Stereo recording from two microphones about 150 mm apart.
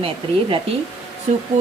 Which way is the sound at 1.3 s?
40° right (ahead or behind).